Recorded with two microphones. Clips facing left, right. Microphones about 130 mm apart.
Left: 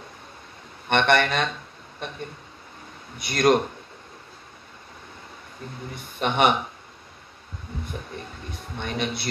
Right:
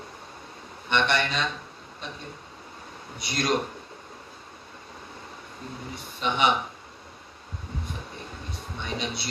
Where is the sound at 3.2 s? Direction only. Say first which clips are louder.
Left 7 dB; 55° left (ahead or behind).